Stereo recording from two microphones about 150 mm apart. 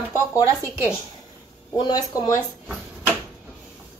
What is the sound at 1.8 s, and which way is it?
Speech, 25° left (ahead or behind).